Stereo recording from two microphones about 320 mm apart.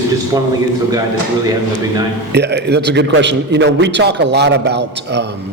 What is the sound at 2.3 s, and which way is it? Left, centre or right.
A man's voice, right.